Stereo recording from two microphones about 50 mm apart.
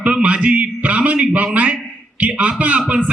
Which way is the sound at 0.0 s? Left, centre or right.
Right.